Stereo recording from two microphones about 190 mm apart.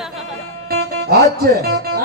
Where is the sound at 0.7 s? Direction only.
55° right (ahead or behind).